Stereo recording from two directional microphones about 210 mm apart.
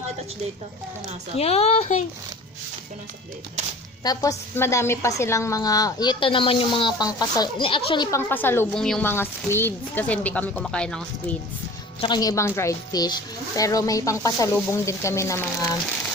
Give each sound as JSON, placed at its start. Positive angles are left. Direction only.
{"t": 1.4, "sound": "a woman's voice", "side_deg": 30}
{"t": 4.0, "sound": "a woman's voice", "side_deg": 15}
{"t": 11.9, "sound": "a woman's voice", "side_deg": 20}